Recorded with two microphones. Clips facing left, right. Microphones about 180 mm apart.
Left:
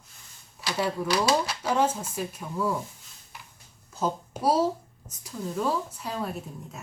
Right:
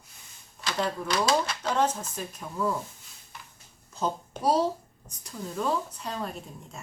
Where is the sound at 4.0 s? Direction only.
5° left (ahead or behind).